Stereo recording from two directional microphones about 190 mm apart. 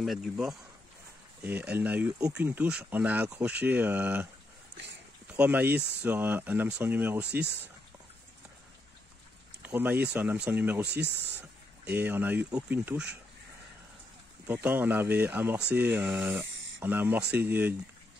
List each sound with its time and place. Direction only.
0.0 s speech: centre (ahead or behind)
5.3 s speech: 5° right (ahead or behind)
9.6 s speech: 10° right (ahead or behind)
10.9 s speech: 60° right (ahead or behind)
11.8 s speech: 10° right (ahead or behind)
14.5 s speech: 10° right (ahead or behind)